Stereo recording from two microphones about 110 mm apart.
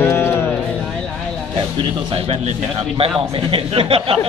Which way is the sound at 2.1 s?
60° right (ahead or behind).